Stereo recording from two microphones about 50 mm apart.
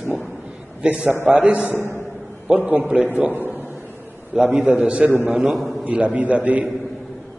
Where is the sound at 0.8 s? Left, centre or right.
Right.